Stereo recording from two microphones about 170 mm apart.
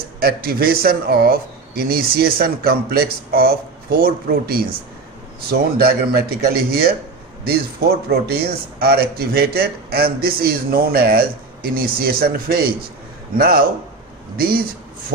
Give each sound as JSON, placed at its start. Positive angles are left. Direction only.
{"t": 0.2, "sound": "a man's voice", "side_deg": -65}
{"t": 8.1, "sound": "a man's voice", "side_deg": -70}